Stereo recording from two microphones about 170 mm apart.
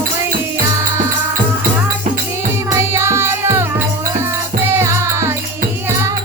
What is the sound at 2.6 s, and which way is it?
Music, 15° right (ahead or behind).